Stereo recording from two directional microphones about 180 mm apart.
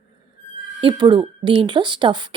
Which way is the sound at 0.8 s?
25° right (ahead or behind).